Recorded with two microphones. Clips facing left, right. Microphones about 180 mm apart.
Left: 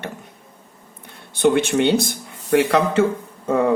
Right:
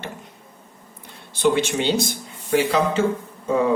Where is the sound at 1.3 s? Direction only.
60° left (ahead or behind).